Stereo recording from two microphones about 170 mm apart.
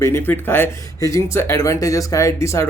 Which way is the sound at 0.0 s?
15° left (ahead or behind).